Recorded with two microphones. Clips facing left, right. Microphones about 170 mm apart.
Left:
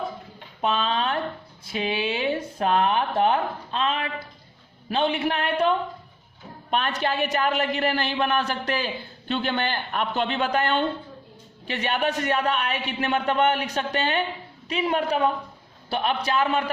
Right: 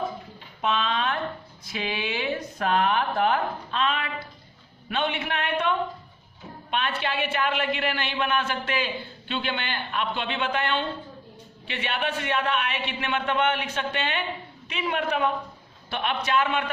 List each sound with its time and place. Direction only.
0.6 s a woman's voice: 35° left (ahead or behind)